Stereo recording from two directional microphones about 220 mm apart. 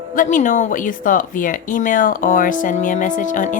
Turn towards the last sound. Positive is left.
turn(degrees=35)  # may be behind; listen again after turning